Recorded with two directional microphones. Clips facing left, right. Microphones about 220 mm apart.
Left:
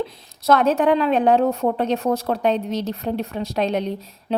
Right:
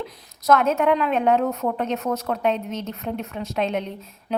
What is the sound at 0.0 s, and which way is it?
A woman's voice, 30° left (ahead or behind).